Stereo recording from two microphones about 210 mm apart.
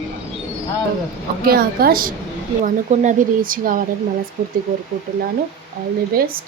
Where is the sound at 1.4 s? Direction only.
45° right (ahead or behind).